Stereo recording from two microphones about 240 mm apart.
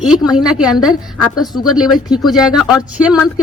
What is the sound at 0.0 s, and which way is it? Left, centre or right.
Speech, centre.